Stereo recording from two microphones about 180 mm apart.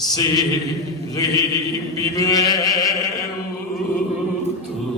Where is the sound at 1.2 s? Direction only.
20° left (ahead or behind).